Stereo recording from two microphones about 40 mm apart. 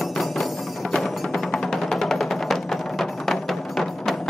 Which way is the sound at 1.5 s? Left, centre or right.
Centre.